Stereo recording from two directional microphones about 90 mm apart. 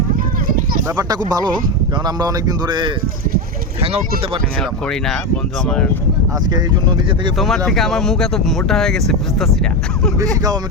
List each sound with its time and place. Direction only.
0.9 s speech: 45° right (ahead or behind)
3.8 s speech: 90° right
4.6 s speech: 5° left (ahead or behind)
6.5 s speech: 55° right (ahead or behind)
7.3 s speech: centre (ahead or behind)
10.2 s speech: 45° right (ahead or behind)